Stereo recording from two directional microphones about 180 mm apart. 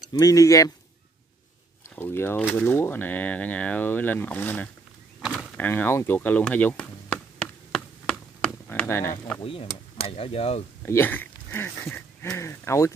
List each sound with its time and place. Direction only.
0.2 s speech: 20° left (ahead or behind)
2.0 s speech: 15° left (ahead or behind)
5.2 s power windows: 5° right (ahead or behind)
5.6 s a sound: 10° left (ahead or behind)
9.4 s speech: 30° left (ahead or behind)
10.9 s speech: 10° left (ahead or behind)